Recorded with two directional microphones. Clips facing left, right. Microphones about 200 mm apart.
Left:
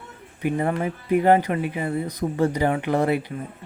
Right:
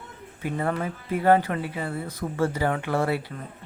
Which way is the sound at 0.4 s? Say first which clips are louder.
Left 4 dB; 15° left (ahead or behind).